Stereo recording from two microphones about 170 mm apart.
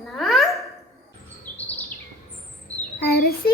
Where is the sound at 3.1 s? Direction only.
65° left (ahead or behind).